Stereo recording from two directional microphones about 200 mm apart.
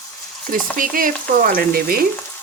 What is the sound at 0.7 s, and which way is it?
A woman's voice, 45° right (ahead or behind).